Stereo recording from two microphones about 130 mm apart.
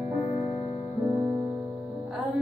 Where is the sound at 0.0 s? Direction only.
25° right (ahead or behind).